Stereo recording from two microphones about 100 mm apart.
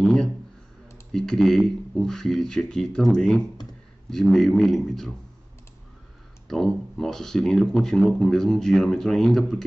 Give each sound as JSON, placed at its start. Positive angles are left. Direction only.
{"t": 0.0, "sound": "a sound", "side_deg": 5}
{"t": 1.1, "sound": "speech", "side_deg": 5}
{"t": 6.4, "sound": "speech", "side_deg": 5}